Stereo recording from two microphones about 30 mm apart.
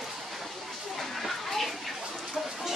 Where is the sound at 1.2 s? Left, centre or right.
Centre.